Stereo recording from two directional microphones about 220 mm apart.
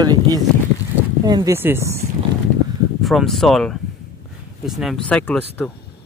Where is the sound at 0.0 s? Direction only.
15° right (ahead or behind).